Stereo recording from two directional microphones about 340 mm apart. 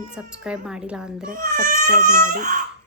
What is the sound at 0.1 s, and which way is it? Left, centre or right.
A woman's voice, centre.